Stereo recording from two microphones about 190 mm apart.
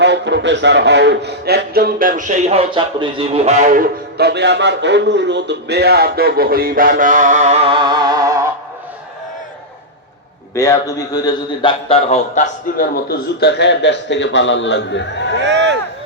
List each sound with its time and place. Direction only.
0.0 s speech: 65° right (ahead or behind); by 8.4 s 15° right (ahead or behind)
10.5 s a man's voice: 15° left (ahead or behind); by 15.3 s 65° left (ahead or behind)
15.4 s speech: 65° right (ahead or behind)